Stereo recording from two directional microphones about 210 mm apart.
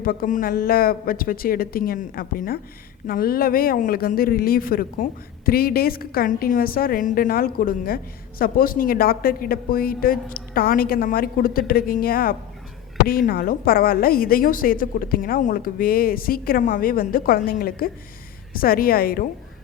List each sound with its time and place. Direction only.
0.0 s a woman's voice: 45° left (ahead or behind)